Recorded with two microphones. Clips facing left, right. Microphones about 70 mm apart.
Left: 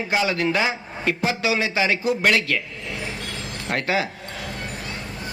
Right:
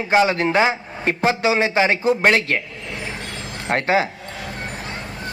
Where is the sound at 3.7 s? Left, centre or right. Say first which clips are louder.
Right 5 dB; right.